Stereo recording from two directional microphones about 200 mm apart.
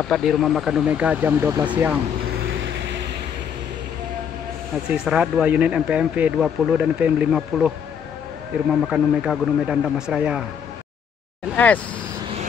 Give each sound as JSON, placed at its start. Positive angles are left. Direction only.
{"t": 0.0, "sound": "speech", "side_deg": 0}
{"t": 2.6, "sound": "vehicle", "side_deg": -60}
{"t": 4.8, "sound": "speech", "side_deg": -5}
{"t": 8.8, "sound": "speech", "side_deg": -5}
{"t": 11.5, "sound": "speech", "side_deg": 5}